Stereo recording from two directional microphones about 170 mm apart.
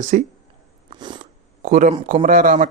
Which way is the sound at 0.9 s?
25° right (ahead or behind).